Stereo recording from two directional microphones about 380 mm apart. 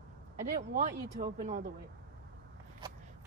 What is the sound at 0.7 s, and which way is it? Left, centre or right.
Speech, centre.